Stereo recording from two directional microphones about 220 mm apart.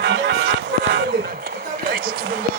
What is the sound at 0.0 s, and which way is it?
Music, 50° right (ahead or behind).